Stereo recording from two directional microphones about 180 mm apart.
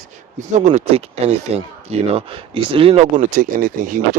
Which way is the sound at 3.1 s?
45° right (ahead or behind).